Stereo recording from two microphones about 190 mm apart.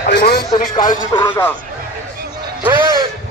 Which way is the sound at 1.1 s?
15° left (ahead or behind).